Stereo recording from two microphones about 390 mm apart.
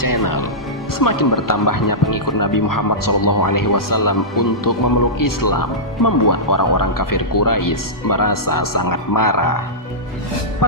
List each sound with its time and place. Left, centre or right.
0.0 s music: left
0.9 s speech: left
10.6 s speech: left